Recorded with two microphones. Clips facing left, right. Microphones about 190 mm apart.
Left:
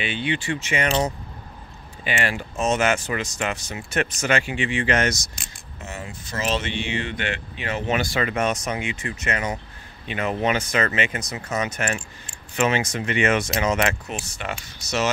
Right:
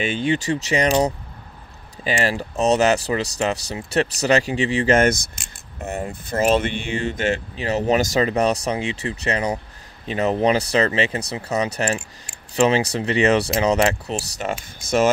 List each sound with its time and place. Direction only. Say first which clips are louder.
0.0 s speech: right 5 dB; 45° right (ahead or behind)
2.0 s speech: right 4 dB; 35° right (ahead or behind)
14.8 s speech: right 7 dB; 50° right (ahead or behind)